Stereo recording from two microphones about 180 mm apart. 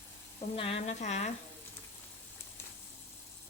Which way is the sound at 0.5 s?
30° left (ahead or behind).